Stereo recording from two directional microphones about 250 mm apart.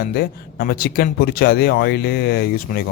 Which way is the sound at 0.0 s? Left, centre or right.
Left.